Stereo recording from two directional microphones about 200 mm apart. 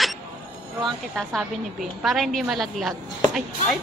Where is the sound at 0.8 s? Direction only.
Centre (ahead or behind).